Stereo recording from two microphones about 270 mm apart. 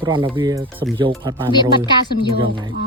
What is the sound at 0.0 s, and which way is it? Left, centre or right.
Speech, centre.